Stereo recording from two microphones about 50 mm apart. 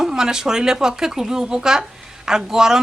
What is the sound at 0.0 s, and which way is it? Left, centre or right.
A woman's voice, centre.